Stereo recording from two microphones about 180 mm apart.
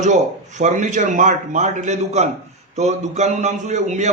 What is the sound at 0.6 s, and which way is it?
A man's voice, 40° right (ahead or behind).